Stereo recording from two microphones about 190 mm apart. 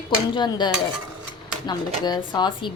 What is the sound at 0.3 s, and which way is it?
A woman's voice, 25° left (ahead or behind).